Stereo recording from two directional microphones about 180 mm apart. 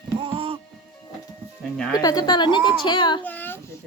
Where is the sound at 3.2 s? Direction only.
10° left (ahead or behind).